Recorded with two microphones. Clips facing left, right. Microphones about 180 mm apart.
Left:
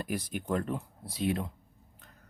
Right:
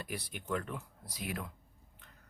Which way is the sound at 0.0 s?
45° left (ahead or behind).